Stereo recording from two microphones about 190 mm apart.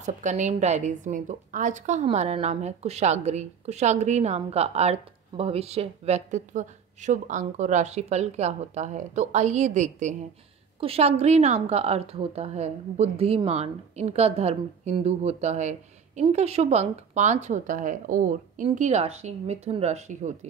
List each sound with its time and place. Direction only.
0.0 s a woman's voice: 40° right (ahead or behind)